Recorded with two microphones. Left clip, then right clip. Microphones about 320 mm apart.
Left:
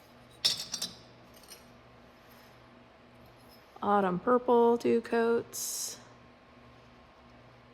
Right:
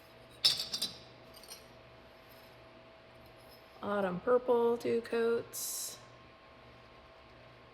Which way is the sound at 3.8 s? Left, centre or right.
Left.